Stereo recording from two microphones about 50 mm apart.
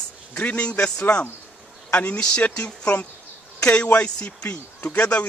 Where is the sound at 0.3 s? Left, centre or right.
Left.